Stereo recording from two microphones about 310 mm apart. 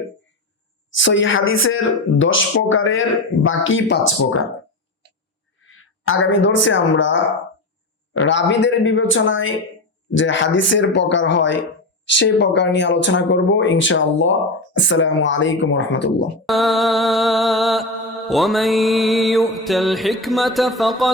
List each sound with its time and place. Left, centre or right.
0.9 s speech: left
5.7 s a sound: left
6.6 s speech: left
16.5 s music: centre
18.3 s mantra: centre